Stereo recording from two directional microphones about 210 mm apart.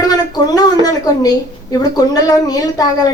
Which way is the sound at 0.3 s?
20° left (ahead or behind).